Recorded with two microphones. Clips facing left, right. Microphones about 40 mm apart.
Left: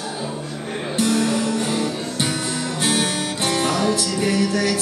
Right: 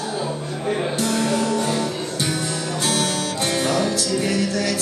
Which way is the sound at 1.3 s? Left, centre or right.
Left.